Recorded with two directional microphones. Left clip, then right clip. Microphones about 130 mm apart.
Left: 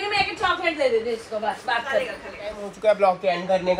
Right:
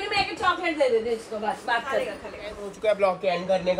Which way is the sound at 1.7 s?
30° right (ahead or behind).